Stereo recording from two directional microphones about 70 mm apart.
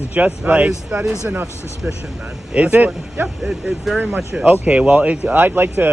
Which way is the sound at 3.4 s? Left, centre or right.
Centre.